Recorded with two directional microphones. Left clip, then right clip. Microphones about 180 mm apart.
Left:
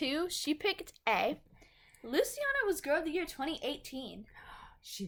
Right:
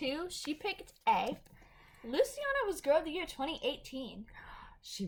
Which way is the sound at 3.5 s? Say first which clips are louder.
Right 1 dB; 45° left (ahead or behind).